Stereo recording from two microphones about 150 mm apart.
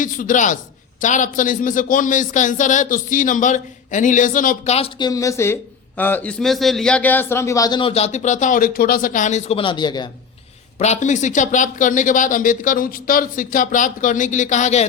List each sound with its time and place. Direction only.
0.0 s speech: 65° left (ahead or behind)
4.9 s speech: 25° left (ahead or behind); by 9.6 s 55° left (ahead or behind)
9.6 s speech: 30° left (ahead or behind)
10.8 s speech: 50° left (ahead or behind)